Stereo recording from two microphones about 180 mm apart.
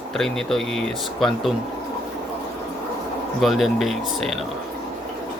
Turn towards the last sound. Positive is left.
turn(degrees=0)  # may be behind; listen again after turning